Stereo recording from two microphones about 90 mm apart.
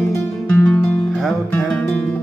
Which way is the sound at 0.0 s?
25° left (ahead or behind).